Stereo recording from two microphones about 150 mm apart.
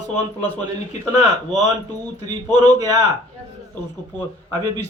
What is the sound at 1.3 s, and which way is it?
A man's voice, 25° right (ahead or behind).